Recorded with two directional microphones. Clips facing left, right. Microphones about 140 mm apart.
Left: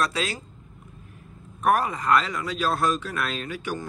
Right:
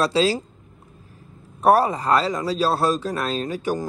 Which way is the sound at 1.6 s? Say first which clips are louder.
Right 6 dB; 35° right (ahead or behind).